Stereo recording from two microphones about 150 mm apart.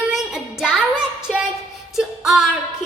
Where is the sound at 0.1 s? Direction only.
Centre (ahead or behind).